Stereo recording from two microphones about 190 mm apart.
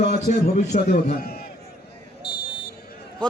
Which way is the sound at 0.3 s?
45° left (ahead or behind).